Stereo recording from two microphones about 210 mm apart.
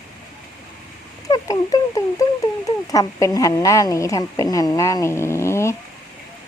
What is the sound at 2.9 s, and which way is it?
A woman's voice, 15° left (ahead or behind).